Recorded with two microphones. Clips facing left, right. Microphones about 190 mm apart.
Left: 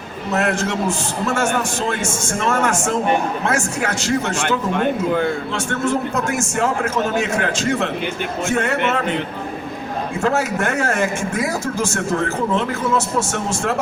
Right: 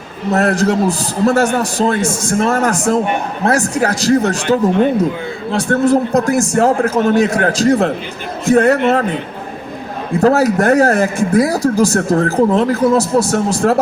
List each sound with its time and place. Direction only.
0.3 s speech: 35° right (ahead or behind)
4.7 s speech: 55° left (ahead or behind)
5.5 s speech: 35° right (ahead or behind)
10.2 s speech: 35° right (ahead or behind)